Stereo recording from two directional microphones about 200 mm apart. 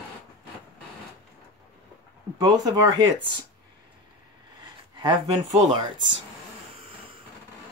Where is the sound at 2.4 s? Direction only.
20° right (ahead or behind).